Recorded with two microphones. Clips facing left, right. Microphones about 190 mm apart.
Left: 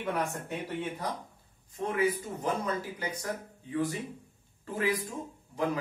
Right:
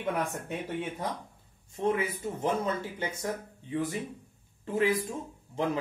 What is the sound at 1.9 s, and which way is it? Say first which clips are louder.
Speech: even; 25° right (ahead or behind).